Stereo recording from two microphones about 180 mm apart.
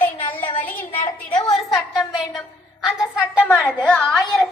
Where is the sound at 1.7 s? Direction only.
Centre (ahead or behind).